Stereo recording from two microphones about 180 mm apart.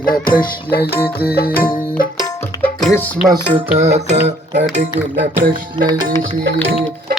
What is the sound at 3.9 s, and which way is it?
Music, 40° right (ahead or behind).